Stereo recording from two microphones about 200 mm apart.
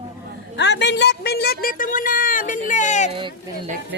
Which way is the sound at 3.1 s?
25° right (ahead or behind).